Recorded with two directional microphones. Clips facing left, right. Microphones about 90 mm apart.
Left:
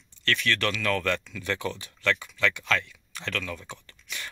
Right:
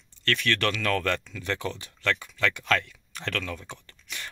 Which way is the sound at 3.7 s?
35° right (ahead or behind).